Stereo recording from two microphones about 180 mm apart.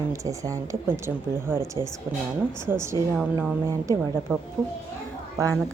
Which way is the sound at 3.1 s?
5° right (ahead or behind).